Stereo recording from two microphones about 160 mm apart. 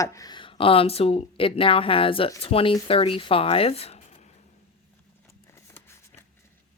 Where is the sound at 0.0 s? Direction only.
20° left (ahead or behind); by 4.3 s 40° left (ahead or behind).